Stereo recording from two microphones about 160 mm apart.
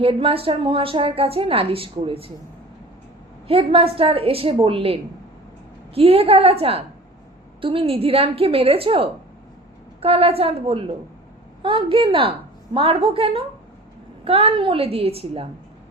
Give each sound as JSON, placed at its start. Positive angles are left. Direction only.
{"t": 0.0, "sound": "a woman's voice", "side_deg": -35}
{"t": 3.4, "sound": "a woman's voice", "side_deg": -35}